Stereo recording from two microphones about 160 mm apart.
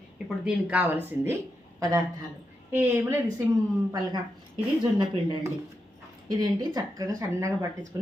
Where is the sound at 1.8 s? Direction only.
20° right (ahead or behind).